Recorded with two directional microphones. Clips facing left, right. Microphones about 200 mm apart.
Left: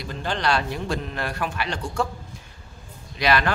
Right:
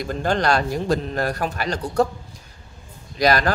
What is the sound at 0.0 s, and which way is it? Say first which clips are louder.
A man's voice: right 5 dB; 45° right (ahead or behind).